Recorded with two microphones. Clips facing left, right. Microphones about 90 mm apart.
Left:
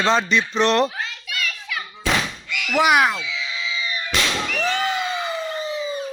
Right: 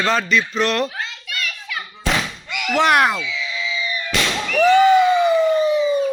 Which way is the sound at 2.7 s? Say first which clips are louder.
Right 1 dB; 5° left (ahead or behind).